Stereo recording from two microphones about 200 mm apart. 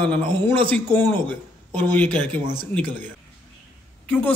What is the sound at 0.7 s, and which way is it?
Speech, 10° left (ahead or behind).